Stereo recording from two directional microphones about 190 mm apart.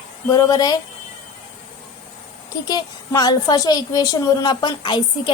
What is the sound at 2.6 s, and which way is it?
A woman's voice, 20° left (ahead or behind).